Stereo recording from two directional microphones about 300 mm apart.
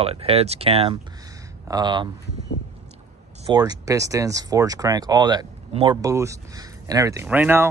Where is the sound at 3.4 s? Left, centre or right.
Centre.